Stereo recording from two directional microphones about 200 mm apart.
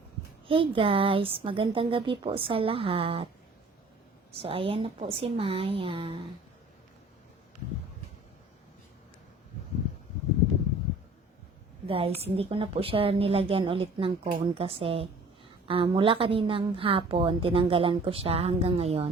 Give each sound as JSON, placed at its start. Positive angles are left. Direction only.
{"t": 0.4, "sound": "a woman's voice", "side_deg": -25}
{"t": 4.4, "sound": "a woman's voice", "side_deg": -25}
{"t": 11.9, "sound": "a woman's voice", "side_deg": -30}